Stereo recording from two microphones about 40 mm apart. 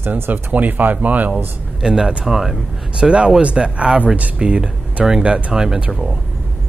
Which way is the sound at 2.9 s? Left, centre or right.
Right.